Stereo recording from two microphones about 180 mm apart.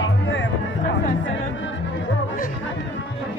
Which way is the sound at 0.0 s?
90° left.